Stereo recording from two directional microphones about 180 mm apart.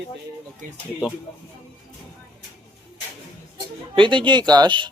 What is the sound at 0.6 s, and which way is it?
Speech, 45° right (ahead or behind).